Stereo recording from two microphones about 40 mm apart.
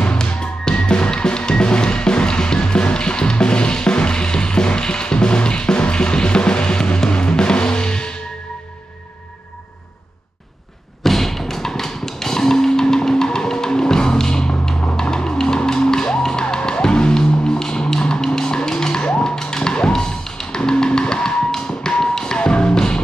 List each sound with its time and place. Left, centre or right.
0.0 s music: left
11.0 s music: centre; by 22.9 s left